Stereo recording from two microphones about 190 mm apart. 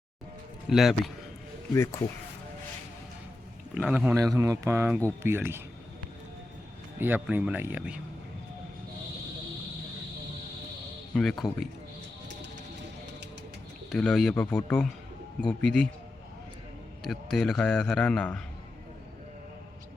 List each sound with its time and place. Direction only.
0.7 s a man's voice: centre (ahead or behind)
1.7 s speech: 15° left (ahead or behind)
3.8 s speech: 5° right (ahead or behind)
7.0 s speech: 10° right (ahead or behind)
11.1 s a man's voice: centre (ahead or behind)
13.9 s a man's voice: centre (ahead or behind)
17.0 s a man's voice: centre (ahead or behind)